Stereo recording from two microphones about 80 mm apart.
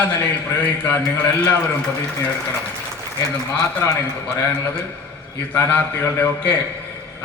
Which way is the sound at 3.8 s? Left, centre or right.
Left.